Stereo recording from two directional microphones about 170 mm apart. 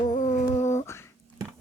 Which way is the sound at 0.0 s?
45° left (ahead or behind).